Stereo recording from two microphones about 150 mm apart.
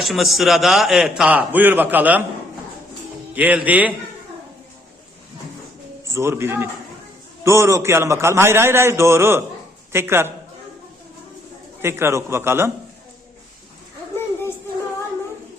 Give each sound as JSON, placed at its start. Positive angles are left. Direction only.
{"t": 0.0, "sound": "a man's voice", "side_deg": 0}
{"t": 3.3, "sound": "a man's voice", "side_deg": -10}
{"t": 6.1, "sound": "a man's voice", "side_deg": -20}
{"t": 11.8, "sound": "a man's voice", "side_deg": -15}